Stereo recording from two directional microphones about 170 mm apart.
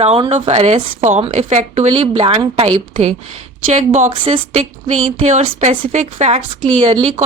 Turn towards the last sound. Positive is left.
turn(degrees=-35)  # may be behind; listen again after turning